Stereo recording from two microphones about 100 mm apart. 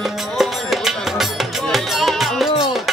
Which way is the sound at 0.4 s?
Centre (ahead or behind).